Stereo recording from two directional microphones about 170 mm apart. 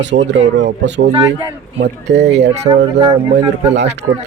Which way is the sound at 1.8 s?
90° right.